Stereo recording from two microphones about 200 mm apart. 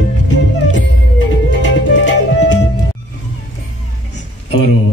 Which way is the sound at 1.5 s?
65° left (ahead or behind).